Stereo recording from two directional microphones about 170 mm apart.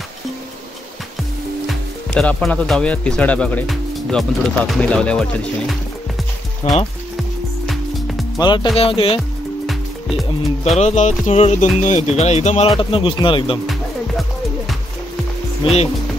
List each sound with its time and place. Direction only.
2.1 s speech: 5° left (ahead or behind)
6.6 s speech: 40° left (ahead or behind)
8.4 s speech: 25° left (ahead or behind)
9.7 s music: centre (ahead or behind)
10.8 s speech: 45° left (ahead or behind); by 13.6 s 30° left (ahead or behind)